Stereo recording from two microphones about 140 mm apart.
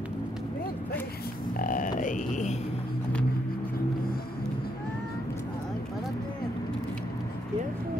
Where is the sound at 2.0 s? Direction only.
65° left (ahead or behind).